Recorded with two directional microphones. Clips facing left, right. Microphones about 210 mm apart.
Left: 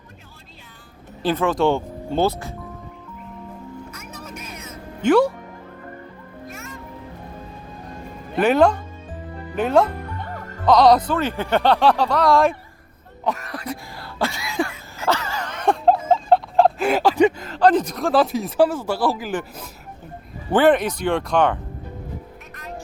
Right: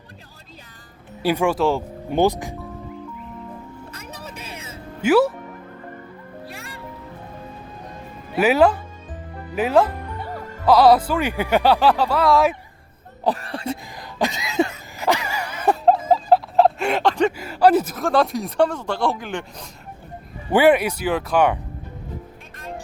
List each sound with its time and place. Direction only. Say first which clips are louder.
1.2 s speech: even; 10° right (ahead or behind)
3.9 s vehicle: even; 35° right (ahead or behind)
5.0 s speech: even; 5° right (ahead or behind)
6.5 s music: left 1 dB; 35° right (ahead or behind)
8.3 s speech: even; 5° right (ahead or behind)
13.2 s speech: right 3 dB; 30° right (ahead or behind)
14.0 s cough: right 1 dB; 15° right (ahead or behind)
14.9 s wail: right 1 dB; 15° right (ahead or behind)
16.1 s a sound: even; 5° right (ahead or behind)
17.3 s speech: right 1 dB; 10° right (ahead or behind)
20.5 s speech: right 1 dB; 10° right (ahead or behind)